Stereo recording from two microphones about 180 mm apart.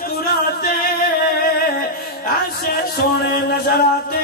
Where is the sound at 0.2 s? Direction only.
55° left (ahead or behind).